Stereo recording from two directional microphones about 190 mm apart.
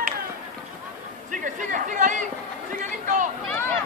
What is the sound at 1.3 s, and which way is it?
Chatter, 45° right (ahead or behind).